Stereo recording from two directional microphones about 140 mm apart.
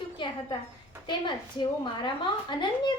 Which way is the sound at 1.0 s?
35° left (ahead or behind).